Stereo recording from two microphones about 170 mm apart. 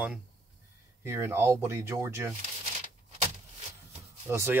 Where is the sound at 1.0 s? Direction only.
15° right (ahead or behind).